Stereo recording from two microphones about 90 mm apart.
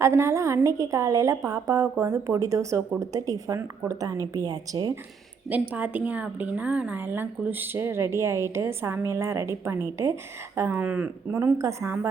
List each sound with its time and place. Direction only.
0.0 s a woman's voice: 30° right (ahead or behind)
5.5 s a woman's voice: 15° right (ahead or behind)
10.8 s speech: 15° right (ahead or behind)
11.3 s a woman's voice: 35° right (ahead or behind)